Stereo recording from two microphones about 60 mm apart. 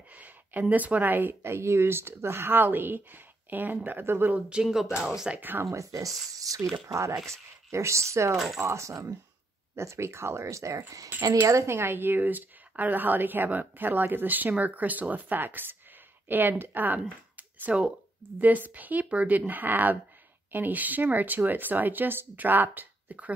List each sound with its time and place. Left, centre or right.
0.1 s speech: right
4.3 s speech: centre
4.6 s speech: centre
5.3 s speech: right
5.7 s speech: right
6.9 s speech: right
11.7 s speech: right
17.4 s a sound: right
18.4 s speech: right